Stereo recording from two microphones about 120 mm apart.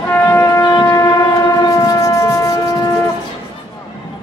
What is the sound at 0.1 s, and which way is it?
Shofar, 25° left (ahead or behind).